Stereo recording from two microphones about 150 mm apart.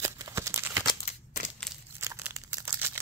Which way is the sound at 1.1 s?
55° left (ahead or behind).